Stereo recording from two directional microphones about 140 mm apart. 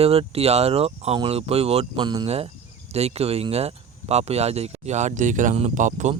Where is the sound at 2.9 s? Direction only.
45° right (ahead or behind).